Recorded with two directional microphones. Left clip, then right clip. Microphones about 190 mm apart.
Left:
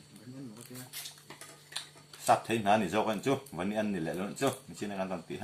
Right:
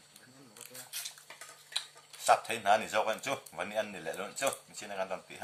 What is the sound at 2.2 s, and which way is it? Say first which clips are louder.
Speech: even; 30° right (ahead or behind).